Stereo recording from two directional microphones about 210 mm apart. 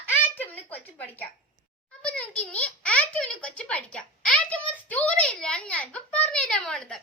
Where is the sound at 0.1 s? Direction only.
10° left (ahead or behind).